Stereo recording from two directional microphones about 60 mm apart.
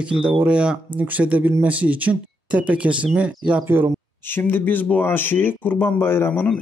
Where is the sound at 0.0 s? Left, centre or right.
Centre.